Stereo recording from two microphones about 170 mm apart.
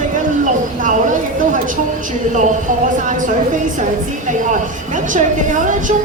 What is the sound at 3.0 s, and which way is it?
Speech, 50° right (ahead or behind).